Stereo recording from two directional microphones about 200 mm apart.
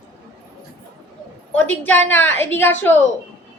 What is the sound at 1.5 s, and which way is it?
A woman's voice, 10° left (ahead or behind).